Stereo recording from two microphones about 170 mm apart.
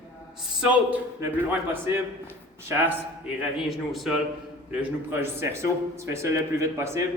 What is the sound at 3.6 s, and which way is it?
Speech, centre (ahead or behind).